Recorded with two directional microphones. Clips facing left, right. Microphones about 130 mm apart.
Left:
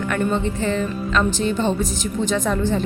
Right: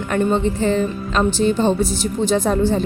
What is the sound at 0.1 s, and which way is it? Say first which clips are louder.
Speech: right 5 dB; 30° right (ahead or behind).